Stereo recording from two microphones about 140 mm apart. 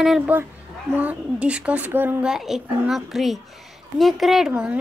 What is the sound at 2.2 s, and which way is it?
A woman's voice, 5° right (ahead or behind).